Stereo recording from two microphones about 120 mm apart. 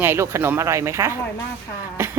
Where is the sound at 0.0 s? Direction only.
20° right (ahead or behind).